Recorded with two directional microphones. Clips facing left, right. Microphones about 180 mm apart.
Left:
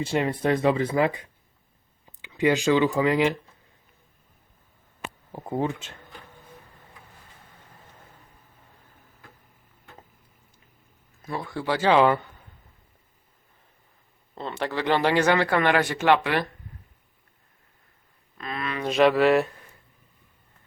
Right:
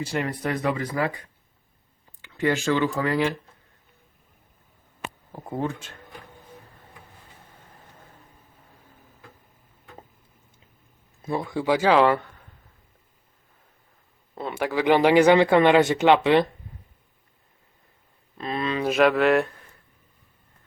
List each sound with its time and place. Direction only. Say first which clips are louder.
0.0 s speech: left 3 dB; 25° left (ahead or behind)
2.2 s speech: left 2 dB; 15° left (ahead or behind)
5.3 s speech: left 2 dB; 15° left (ahead or behind)
11.2 s speech: right 5 dB; 20° right (ahead or behind)
11.9 s speech: left 1 dB; centre (ahead or behind)
14.3 s speech: right 3 dB; 5° right (ahead or behind)
18.3 s speech: right 5 dB; 30° right (ahead or behind)
18.8 s speech: left 1 dB; 5° right (ahead or behind)